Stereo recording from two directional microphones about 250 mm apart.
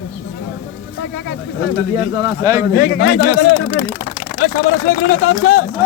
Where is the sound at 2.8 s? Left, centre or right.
Left.